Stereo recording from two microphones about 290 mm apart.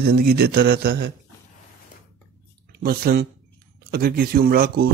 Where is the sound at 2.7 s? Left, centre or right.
Right.